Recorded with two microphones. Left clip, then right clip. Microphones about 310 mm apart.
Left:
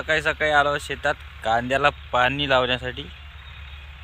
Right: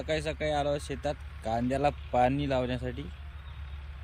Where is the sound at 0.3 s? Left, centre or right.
Left.